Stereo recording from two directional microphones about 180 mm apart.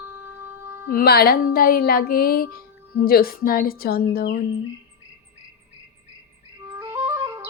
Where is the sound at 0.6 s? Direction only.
15° right (ahead or behind).